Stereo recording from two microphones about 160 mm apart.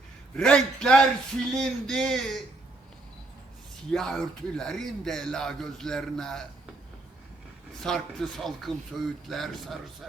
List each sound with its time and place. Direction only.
0.3 s speech: 5° left (ahead or behind)
3.9 s speech: 5° left (ahead or behind)
7.8 s speech: 5° left (ahead or behind)